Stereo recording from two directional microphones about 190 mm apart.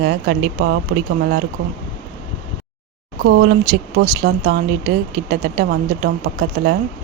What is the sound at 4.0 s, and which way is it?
Speech, 50° right (ahead or behind).